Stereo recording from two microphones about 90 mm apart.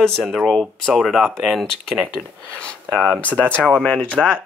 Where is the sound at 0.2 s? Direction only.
Centre (ahead or behind).